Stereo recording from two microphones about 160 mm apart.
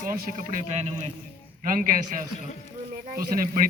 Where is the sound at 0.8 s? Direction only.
45° right (ahead or behind).